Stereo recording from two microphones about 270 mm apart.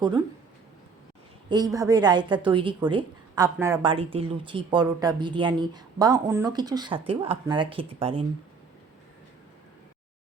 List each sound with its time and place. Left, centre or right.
1.5 s a woman's voice: centre